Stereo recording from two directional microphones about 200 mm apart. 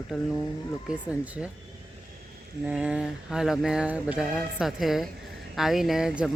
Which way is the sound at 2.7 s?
5° right (ahead or behind).